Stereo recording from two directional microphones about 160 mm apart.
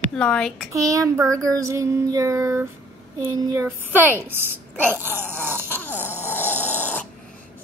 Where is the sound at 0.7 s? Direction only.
20° right (ahead or behind).